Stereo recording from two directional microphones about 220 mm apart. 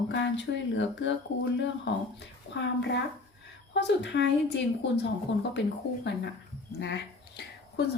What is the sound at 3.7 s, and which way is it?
Speech, 50° left (ahead or behind).